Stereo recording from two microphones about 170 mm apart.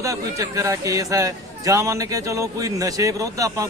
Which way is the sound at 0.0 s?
20° right (ahead or behind).